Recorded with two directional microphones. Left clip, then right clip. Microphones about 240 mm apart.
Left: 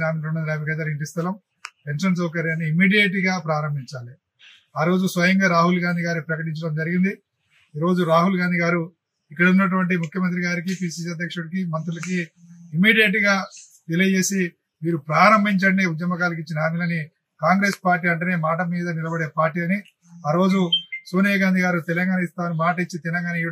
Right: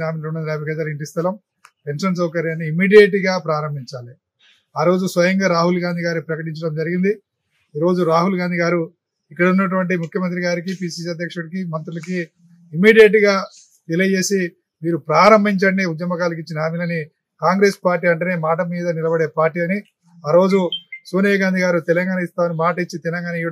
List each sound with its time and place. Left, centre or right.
0.0 s a man's voice: centre
4.7 s a man's voice: centre